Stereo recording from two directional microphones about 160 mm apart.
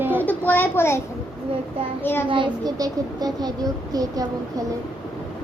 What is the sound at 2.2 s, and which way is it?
A child's voice, 25° right (ahead or behind).